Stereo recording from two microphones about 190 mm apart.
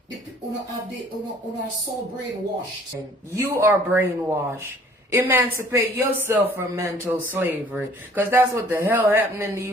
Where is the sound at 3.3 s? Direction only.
10° right (ahead or behind).